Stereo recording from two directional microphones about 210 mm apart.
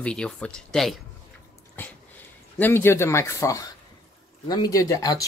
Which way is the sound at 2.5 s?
10° left (ahead or behind).